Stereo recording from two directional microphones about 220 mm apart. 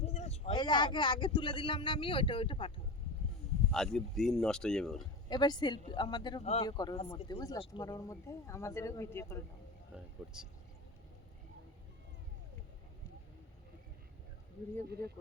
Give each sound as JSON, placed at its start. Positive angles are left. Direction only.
{"t": 0.0, "sound": "a man's voice", "side_deg": 30}
{"t": 3.7, "sound": "speech", "side_deg": 0}
{"t": 5.3, "sound": "speech", "side_deg": 20}
{"t": 10.2, "sound": "speech", "side_deg": -5}